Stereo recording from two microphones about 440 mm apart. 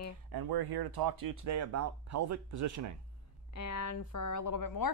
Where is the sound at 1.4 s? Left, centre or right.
Right.